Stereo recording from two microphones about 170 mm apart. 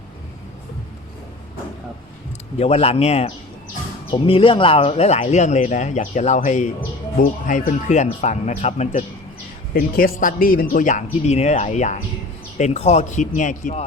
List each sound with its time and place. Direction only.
2.6 s a man's voice: 35° left (ahead or behind)
9.7 s speech: 55° left (ahead or behind)